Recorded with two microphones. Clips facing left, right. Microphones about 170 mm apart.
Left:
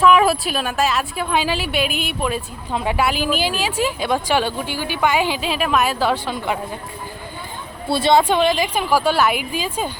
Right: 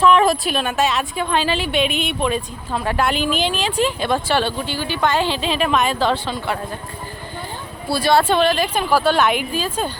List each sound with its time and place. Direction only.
0.0 s a woman's voice: 5° left (ahead or behind)
7.9 s speech: 25° left (ahead or behind)
8.2 s speech: 15° left (ahead or behind)